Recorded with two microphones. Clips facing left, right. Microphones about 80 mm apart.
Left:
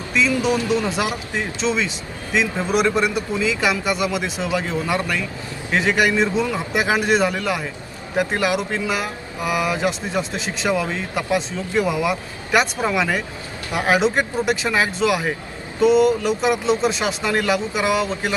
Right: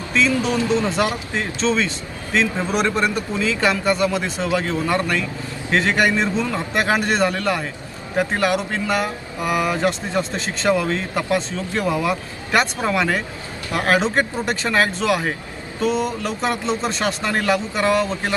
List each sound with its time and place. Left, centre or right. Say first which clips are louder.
0.6 s speech: right 1 dB; right
1.4 s speech: right 2 dB; centre